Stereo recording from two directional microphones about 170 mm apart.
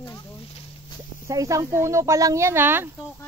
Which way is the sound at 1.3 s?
20° right (ahead or behind).